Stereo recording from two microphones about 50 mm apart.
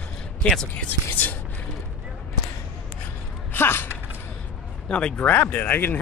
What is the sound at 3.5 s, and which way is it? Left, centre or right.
Speech, left.